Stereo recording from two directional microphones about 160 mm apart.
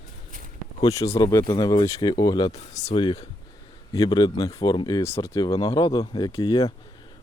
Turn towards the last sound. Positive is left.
turn(degrees=20)  # may be behind; listen again after turning